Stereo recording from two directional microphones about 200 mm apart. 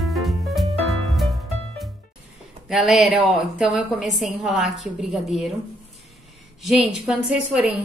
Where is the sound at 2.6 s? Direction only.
Centre (ahead or behind).